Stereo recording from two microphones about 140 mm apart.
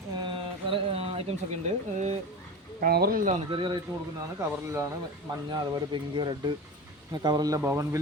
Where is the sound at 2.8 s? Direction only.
90° right.